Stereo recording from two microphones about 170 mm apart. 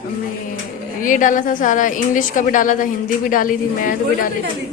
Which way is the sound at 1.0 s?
50° left (ahead or behind).